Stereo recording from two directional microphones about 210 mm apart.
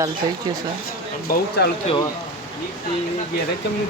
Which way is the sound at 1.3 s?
50° left (ahead or behind).